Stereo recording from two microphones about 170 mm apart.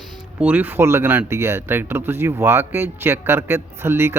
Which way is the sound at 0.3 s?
10° right (ahead or behind).